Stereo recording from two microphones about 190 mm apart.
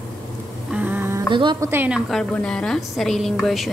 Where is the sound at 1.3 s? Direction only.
25° right (ahead or behind).